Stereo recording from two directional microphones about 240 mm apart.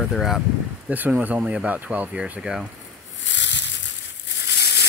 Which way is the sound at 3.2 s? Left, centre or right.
Left.